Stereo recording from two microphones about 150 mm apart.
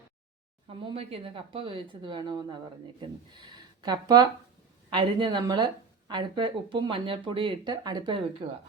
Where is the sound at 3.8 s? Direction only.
25° right (ahead or behind).